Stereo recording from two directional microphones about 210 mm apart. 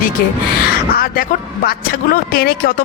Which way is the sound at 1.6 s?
45° left (ahead or behind).